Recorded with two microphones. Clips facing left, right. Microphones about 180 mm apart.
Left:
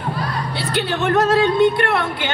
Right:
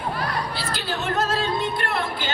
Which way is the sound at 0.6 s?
65° left (ahead or behind).